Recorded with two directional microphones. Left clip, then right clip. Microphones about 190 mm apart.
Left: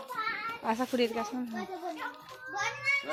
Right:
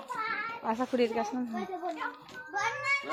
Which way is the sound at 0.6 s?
10° left (ahead or behind).